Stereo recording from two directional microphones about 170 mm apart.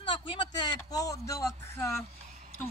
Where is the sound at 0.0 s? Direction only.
30° left (ahead or behind).